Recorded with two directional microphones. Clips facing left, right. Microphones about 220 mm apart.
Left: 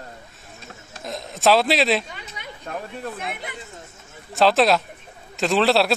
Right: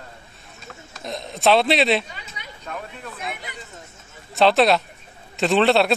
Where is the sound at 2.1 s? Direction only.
50° left (ahead or behind).